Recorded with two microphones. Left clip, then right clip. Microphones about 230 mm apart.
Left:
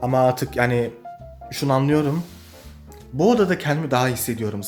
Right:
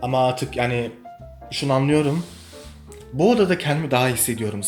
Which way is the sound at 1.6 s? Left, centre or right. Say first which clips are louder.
Even; centre.